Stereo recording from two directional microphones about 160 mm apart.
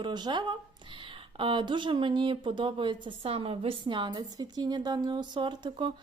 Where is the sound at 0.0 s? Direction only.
25° right (ahead or behind).